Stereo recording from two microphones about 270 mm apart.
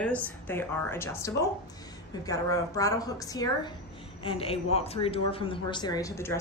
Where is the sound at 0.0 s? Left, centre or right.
Centre.